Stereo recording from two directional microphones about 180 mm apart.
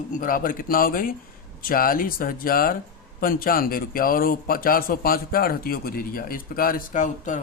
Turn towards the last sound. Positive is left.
turn(degrees=45)  # may be behind; listen again after turning